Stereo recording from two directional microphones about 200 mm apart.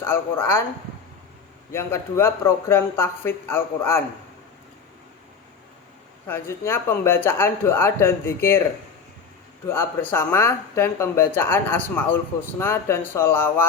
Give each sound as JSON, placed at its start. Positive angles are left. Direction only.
{"t": 0.0, "sound": "speech", "side_deg": 10}
{"t": 1.7, "sound": "speech", "side_deg": 10}
{"t": 6.2, "sound": "speech", "side_deg": 10}
{"t": 9.6, "sound": "speech", "side_deg": 10}